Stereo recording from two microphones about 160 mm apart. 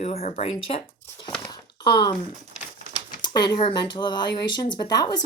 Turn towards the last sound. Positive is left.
turn(degrees=25)  # may be behind; listen again after turning